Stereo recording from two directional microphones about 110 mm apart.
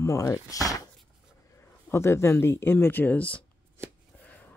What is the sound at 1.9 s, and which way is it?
Speech, 25° left (ahead or behind).